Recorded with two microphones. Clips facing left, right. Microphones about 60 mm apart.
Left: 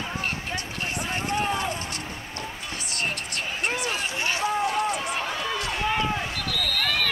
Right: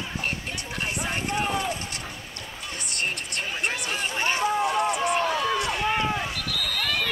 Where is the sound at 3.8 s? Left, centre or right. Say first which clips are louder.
Right 1 dB; right.